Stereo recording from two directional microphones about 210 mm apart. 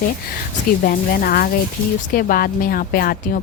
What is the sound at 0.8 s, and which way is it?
A woman's voice, 45° left (ahead or behind).